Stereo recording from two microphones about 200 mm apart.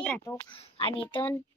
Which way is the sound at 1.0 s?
10° left (ahead or behind).